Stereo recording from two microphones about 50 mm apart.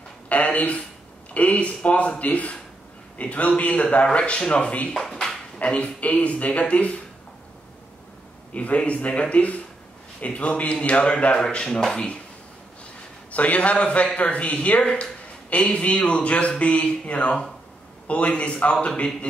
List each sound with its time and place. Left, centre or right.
0.3 s speech: left
3.9 s speech: left
5.0 s speech: centre
5.6 s speech: left
8.5 s speech: left
11.6 s speech: centre
13.3 s speech: left